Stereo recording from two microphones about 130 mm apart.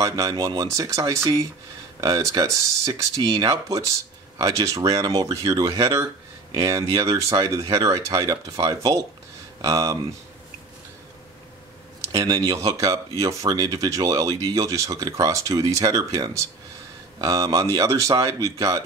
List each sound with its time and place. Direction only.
0.0 s speech: 25° right (ahead or behind)
12.1 s speech: 25° right (ahead or behind)